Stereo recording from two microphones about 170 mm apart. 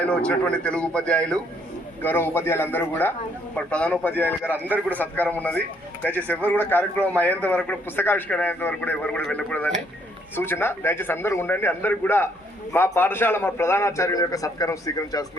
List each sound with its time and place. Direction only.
0.0 s a man's voice: 5° left (ahead or behind)